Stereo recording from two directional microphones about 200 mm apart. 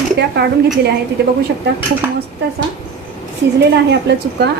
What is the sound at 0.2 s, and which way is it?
Speech, 55° right (ahead or behind).